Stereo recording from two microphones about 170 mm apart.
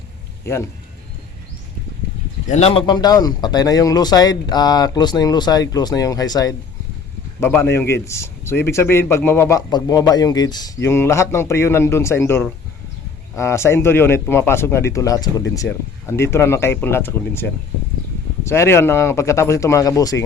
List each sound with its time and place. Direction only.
0.4 s a man's voice: 15° left (ahead or behind)
2.5 s a man's voice: 35° left (ahead or behind); by 20.2 s 20° left (ahead or behind)